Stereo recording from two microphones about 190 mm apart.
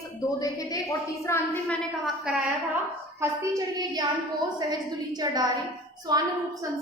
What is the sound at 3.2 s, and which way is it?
A woman's voice, 15° right (ahead or behind).